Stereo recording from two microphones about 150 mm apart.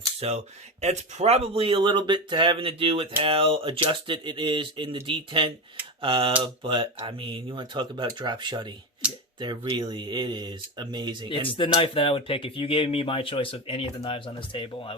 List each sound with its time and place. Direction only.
0.2 s speech: 45° right (ahead or behind); by 11.3 s 30° right (ahead or behind)
11.3 s speech: 35° left (ahead or behind)